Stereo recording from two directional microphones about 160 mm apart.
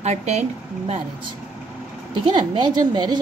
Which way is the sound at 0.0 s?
45° right (ahead or behind).